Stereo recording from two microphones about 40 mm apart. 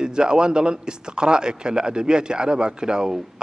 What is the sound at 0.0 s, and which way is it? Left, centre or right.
A man's voice, right.